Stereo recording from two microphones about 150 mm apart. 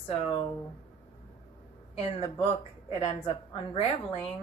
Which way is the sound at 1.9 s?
40° left (ahead or behind).